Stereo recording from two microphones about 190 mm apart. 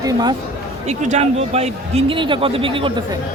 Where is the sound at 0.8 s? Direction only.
35° right (ahead or behind).